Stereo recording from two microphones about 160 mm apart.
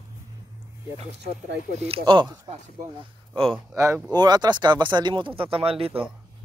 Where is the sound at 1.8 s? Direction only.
35° right (ahead or behind).